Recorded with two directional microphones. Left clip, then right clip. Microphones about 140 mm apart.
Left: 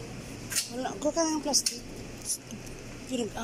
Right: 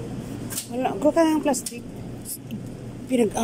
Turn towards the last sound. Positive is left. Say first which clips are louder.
# right 11 dB
turn(degrees=-30)  # may be behind; listen again after turning